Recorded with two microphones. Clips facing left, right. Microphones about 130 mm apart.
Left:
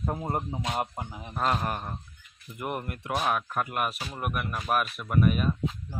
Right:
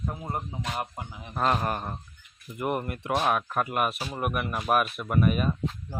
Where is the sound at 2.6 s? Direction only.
5° right (ahead or behind).